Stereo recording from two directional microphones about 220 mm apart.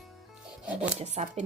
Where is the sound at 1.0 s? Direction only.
30° right (ahead or behind).